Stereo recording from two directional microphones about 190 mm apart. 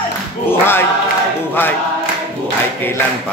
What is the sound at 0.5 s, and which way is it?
Choir, 10° left (ahead or behind).